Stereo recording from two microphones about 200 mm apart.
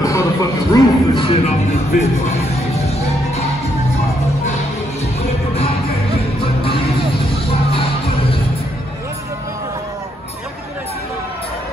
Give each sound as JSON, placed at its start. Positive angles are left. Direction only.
{"t": 0.0, "sound": "music", "side_deg": 15}